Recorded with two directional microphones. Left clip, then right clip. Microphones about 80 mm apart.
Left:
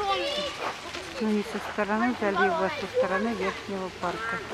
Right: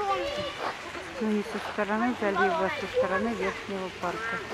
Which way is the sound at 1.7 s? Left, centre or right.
Centre.